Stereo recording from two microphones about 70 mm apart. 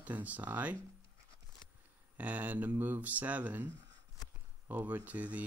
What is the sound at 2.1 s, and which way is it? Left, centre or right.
Speech, right.